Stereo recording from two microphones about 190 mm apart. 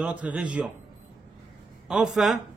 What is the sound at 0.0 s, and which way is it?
Speech, 5° right (ahead or behind).